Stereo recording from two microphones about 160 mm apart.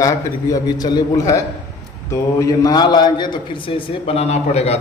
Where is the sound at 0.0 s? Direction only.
25° left (ahead or behind).